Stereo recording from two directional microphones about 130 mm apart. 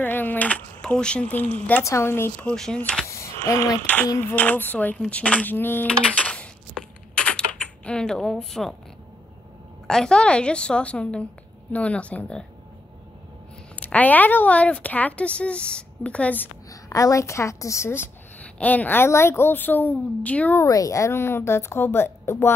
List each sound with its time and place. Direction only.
0.0 s a sound: 15° left (ahead or behind)
1.7 s a woman's voice: 20° left (ahead or behind)
2.5 s a woman's voice: 5° left (ahead or behind)
3.1 s a sound: 25° left (ahead or behind)
3.8 s a woman's voice: 10° left (ahead or behind)
6.1 s a sound: 10° left (ahead or behind)
9.8 s a woman's voice: 5° left (ahead or behind)
13.7 s a woman's voice: 10° left (ahead or behind)
16.9 s a woman's voice: 25° left (ahead or behind)
20.6 s a woman's voice: 25° left (ahead or behind)